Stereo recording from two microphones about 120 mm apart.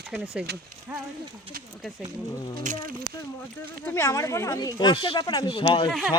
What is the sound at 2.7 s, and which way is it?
Speech, 90° right.